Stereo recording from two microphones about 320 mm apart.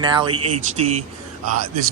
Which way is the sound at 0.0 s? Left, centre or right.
Centre.